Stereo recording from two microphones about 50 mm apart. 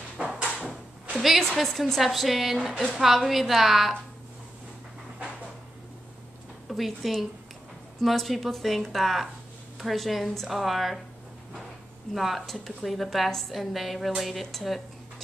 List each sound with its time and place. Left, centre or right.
0.2 s a sound: right
1.1 s a woman's voice: centre
6.7 s a woman's voice: centre
12.1 s a woman's voice: centre